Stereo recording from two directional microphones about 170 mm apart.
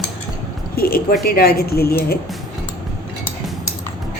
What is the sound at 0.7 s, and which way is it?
Speech, 60° left (ahead or behind).